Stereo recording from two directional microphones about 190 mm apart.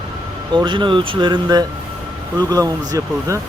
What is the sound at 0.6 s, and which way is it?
Speech, 25° right (ahead or behind).